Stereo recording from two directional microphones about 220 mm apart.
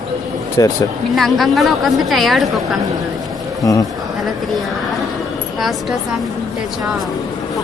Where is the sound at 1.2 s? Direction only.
Centre (ahead or behind).